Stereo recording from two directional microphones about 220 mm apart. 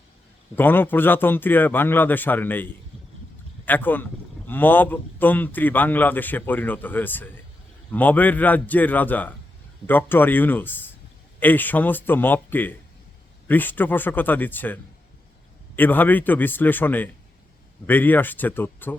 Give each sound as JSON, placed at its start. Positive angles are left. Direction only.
{"t": 0.5, "sound": "a man's voice", "side_deg": 10}